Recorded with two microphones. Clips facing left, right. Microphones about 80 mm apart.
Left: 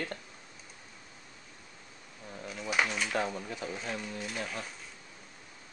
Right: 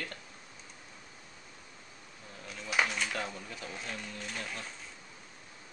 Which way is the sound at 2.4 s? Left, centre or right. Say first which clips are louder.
Left 1 dB; centre.